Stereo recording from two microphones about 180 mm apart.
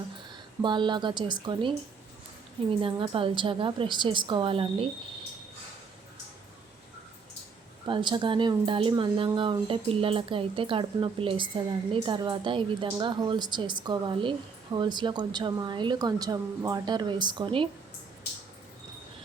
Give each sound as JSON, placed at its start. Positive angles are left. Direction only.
{"t": 0.6, "sound": "speech", "side_deg": -25}
{"t": 7.9, "sound": "speech", "side_deg": -25}